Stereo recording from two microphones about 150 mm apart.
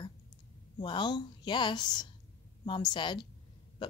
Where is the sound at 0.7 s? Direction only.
30° left (ahead or behind).